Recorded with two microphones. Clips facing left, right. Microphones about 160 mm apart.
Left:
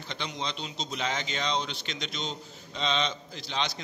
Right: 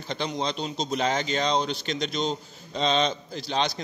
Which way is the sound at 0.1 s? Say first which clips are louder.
Right 7 dB; 40° right (ahead or behind).